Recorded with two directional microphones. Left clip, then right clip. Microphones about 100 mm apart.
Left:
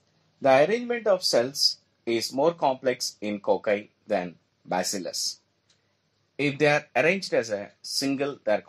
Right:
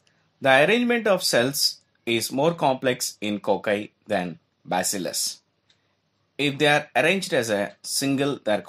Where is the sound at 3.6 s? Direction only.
65° right (ahead or behind).